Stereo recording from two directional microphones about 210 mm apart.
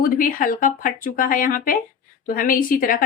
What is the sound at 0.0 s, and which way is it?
A woman's voice, 40° left (ahead or behind).